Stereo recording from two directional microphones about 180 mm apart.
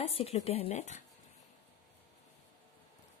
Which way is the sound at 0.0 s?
35° left (ahead or behind).